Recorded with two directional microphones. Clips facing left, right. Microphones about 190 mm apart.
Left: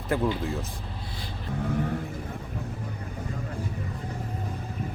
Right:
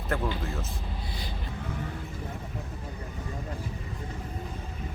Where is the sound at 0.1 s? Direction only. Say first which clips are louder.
Left 5 dB; 15° left (ahead or behind).